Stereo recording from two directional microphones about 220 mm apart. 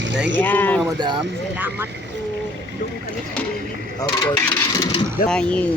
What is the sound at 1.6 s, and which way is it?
Speech, 10° right (ahead or behind).